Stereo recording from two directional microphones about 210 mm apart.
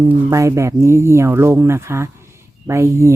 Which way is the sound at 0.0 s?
15° right (ahead or behind).